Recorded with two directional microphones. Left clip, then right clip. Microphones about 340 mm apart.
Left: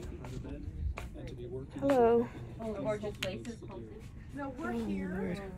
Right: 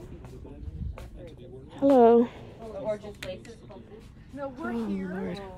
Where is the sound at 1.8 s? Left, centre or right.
Right.